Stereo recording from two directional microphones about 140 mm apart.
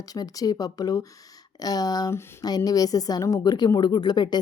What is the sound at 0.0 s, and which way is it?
Speech, 25° left (ahead or behind).